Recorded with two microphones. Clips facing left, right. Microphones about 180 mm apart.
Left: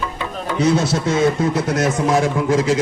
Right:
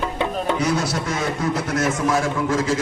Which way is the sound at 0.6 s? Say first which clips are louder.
Left 5 dB; 25° left (ahead or behind).